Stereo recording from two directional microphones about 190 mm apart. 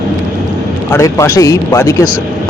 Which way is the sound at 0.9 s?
15° left (ahead or behind).